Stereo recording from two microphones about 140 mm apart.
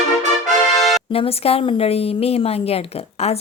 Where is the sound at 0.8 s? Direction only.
Centre (ahead or behind).